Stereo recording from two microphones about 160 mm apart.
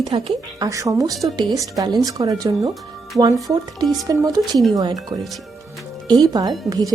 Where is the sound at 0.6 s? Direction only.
20° right (ahead or behind).